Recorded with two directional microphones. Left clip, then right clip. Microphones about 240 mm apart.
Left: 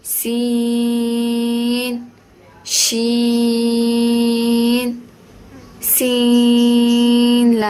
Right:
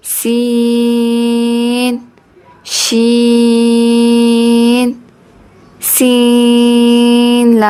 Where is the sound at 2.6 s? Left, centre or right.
Right.